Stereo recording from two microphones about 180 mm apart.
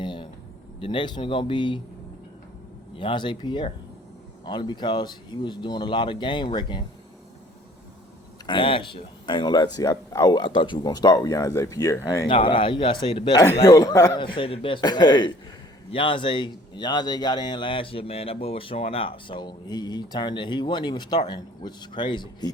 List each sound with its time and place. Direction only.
0.0 s a sound: 25° left (ahead or behind)
0.8 s speech: 30° left (ahead or behind)
2.9 s speech: 30° left (ahead or behind)
8.4 s speech: 30° left (ahead or behind)
13.4 s speech: 20° left (ahead or behind)
14.3 s speech: 30° left (ahead or behind)